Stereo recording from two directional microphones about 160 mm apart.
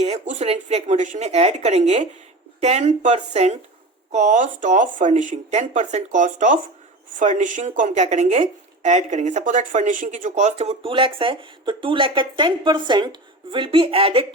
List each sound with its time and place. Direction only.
0.0 s speech: 45° right (ahead or behind)